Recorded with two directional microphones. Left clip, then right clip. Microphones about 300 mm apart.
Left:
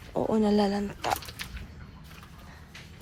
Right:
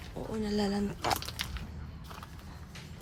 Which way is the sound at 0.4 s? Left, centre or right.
Centre.